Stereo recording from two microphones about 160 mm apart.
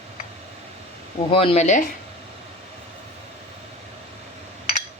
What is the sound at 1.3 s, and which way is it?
Speech, 35° left (ahead or behind).